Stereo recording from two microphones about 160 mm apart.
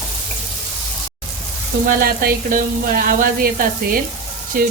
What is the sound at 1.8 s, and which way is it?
Speech, 65° right (ahead or behind).